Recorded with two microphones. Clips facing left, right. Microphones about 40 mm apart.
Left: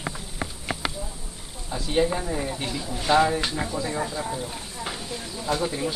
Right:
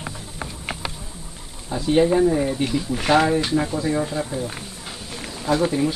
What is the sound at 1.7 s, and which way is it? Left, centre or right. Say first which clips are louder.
Speech: right 6 dB; centre.